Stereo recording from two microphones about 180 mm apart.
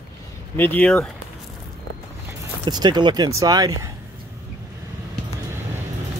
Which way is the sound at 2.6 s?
25° right (ahead or behind).